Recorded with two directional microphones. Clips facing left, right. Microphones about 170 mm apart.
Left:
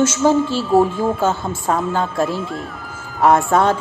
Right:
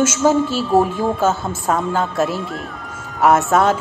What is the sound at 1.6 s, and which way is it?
Speech, 5° left (ahead or behind).